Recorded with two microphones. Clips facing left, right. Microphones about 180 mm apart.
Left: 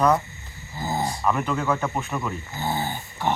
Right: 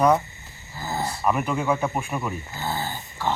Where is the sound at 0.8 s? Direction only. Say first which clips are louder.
Left 2 dB; 15° left (ahead or behind).